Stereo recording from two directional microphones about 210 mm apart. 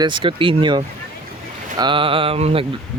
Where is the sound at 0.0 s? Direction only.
20° right (ahead or behind).